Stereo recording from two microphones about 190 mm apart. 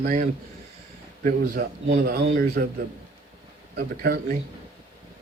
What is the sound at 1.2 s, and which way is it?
A man's voice, 50° right (ahead or behind).